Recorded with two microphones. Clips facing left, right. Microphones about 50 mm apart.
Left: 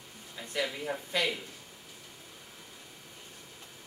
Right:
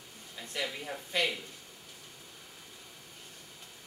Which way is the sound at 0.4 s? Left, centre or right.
Centre.